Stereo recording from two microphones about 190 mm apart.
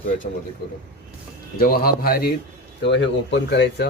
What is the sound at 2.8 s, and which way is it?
Speech, 70° left (ahead or behind).